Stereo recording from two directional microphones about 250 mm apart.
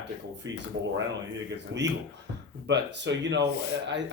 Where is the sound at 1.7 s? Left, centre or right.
Right.